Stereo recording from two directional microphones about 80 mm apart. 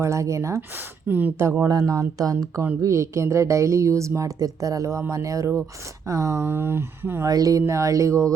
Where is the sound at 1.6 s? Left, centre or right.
Right.